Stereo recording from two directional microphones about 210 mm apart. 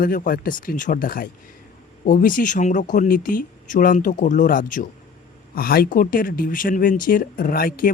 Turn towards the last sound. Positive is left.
turn(degrees=45)  # may be behind; listen again after turning